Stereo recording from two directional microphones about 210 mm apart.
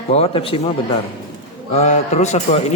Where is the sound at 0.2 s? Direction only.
30° left (ahead or behind).